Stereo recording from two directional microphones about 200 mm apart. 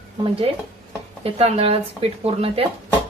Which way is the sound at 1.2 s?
30° right (ahead or behind).